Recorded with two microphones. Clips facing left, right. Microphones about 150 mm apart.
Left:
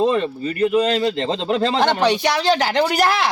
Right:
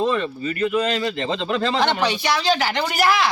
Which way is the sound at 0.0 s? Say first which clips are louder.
Left 3 dB; 35° left (ahead or behind).